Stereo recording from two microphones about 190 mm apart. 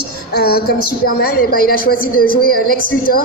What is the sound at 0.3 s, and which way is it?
A woman's voice, 55° left (ahead or behind).